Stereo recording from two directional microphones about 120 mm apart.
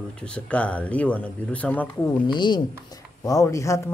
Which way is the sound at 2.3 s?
40° left (ahead or behind).